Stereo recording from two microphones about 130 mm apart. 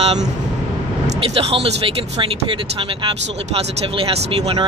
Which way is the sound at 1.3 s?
50° right (ahead or behind).